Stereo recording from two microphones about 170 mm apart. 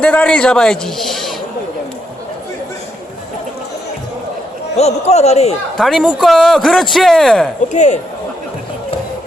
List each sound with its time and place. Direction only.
0.0 s a man's voice: 5° left (ahead or behind)
4.8 s speech: 40° left (ahead or behind)
5.8 s a man's voice: 5° right (ahead or behind)
7.7 s speech: 45° left (ahead or behind)